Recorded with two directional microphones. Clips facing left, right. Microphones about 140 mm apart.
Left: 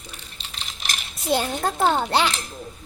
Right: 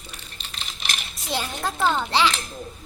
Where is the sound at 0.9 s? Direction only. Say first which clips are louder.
Left 7 dB; 50° left (ahead or behind).